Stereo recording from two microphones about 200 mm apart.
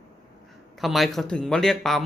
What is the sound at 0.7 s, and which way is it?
Speech, centre (ahead or behind).